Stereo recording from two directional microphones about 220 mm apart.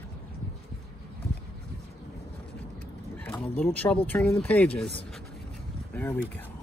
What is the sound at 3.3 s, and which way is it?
Speech, 10° left (ahead or behind).